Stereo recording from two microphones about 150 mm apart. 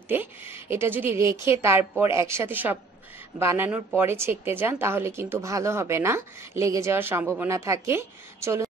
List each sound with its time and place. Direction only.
0.1 s a woman's voice: 15° right (ahead or behind)